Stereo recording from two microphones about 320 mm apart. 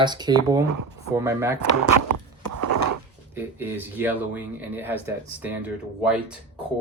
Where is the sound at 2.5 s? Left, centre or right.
Right.